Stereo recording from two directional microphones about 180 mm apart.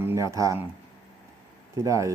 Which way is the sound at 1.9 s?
15° right (ahead or behind).